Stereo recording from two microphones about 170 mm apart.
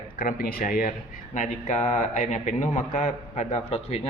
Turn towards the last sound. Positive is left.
turn(degrees=40)  # may be behind; listen again after turning